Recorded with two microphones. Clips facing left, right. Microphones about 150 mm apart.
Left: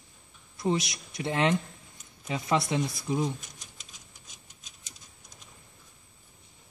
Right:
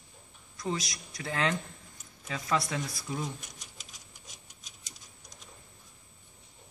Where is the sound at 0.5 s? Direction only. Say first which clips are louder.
Left 6 dB; 25° left (ahead or behind).